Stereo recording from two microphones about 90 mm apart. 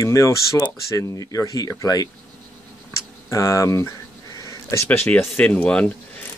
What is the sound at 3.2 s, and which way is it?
Speech, 35° left (ahead or behind).